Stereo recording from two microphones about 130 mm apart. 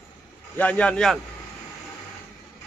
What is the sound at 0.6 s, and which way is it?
Speech, 10° left (ahead or behind).